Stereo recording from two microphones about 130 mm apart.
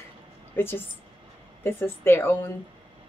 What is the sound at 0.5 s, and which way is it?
A woman's voice, 15° left (ahead or behind).